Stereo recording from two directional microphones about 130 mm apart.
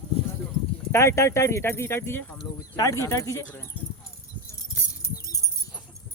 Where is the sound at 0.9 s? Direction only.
20° left (ahead or behind).